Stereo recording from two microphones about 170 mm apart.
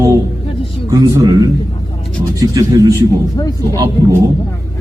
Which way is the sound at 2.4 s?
20° right (ahead or behind).